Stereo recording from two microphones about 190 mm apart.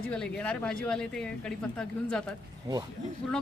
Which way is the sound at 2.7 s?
15° right (ahead or behind).